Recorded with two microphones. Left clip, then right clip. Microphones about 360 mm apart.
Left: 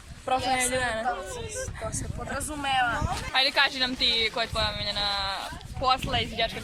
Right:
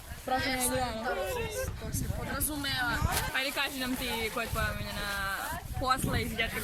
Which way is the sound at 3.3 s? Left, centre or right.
Centre.